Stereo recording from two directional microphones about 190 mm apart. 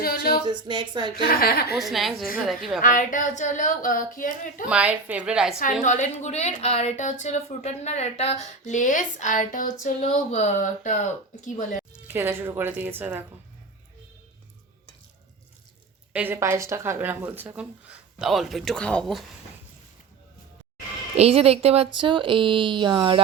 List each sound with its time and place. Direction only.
0.0 s a sound: 55° left (ahead or behind)
0.4 s speech: 25° right (ahead or behind)
1.1 s speech: 50° left (ahead or behind)
1.8 s a woman's voice: centre (ahead or behind)
2.8 s speech: 45° left (ahead or behind)
4.7 s a woman's voice: 10° right (ahead or behind)
5.8 s a woman's voice: 40° left (ahead or behind)
12.0 s speech: 10° right (ahead or behind)
16.1 s speech: 10° right (ahead or behind)
21.2 s speech: 30° right (ahead or behind)